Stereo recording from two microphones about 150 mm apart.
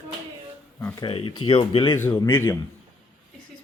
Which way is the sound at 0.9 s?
35° left (ahead or behind).